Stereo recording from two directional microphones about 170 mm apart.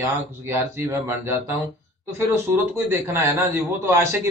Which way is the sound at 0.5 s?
15° right (ahead or behind).